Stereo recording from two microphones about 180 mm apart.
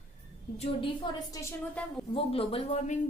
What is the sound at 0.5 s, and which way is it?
Speech, 35° left (ahead or behind).